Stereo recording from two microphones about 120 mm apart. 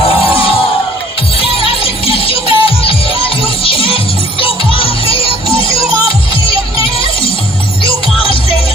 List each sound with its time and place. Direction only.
1.4 s music: 50° left (ahead or behind)